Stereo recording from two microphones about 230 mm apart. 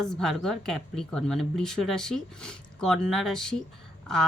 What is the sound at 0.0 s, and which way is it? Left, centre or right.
Speech, centre.